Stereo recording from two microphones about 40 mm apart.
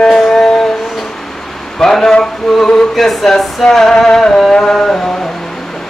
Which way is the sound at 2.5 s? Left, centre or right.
Centre.